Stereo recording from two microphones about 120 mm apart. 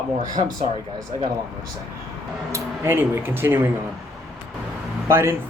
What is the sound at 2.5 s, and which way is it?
Speech, 20° right (ahead or behind).